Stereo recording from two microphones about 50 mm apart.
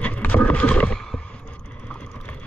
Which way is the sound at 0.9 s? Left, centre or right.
Centre.